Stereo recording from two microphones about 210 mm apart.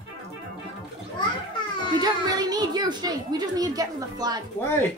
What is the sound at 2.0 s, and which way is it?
A child's voice, 20° right (ahead or behind).